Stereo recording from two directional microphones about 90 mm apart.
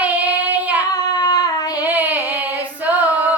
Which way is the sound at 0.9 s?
50° left (ahead or behind).